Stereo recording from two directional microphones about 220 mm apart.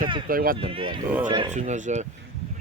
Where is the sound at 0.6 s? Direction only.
25° right (ahead or behind).